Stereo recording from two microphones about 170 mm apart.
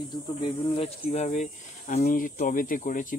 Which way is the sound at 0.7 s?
40° left (ahead or behind).